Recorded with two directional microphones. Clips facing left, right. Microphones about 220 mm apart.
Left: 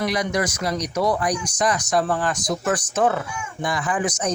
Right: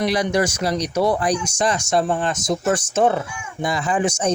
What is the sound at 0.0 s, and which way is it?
Speech, 30° right (ahead or behind).